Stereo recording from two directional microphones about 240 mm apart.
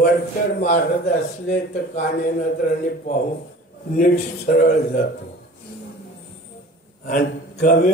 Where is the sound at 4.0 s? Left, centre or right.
Left.